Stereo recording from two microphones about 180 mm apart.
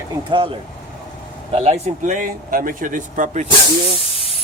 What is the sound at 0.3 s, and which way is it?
Speech, 30° right (ahead or behind).